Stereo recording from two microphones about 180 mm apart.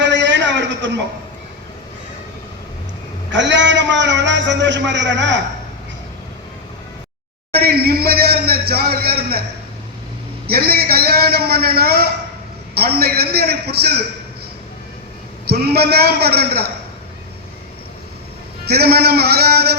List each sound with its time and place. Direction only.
0.0 s a sound: 85° right
3.3 s a man's voice: 85° right
7.5 s speech: 60° right (ahead or behind)
10.4 s a man's voice: 60° right (ahead or behind)
15.4 s a man's voice: 60° right (ahead or behind)
18.6 s a man's voice: 60° right (ahead or behind)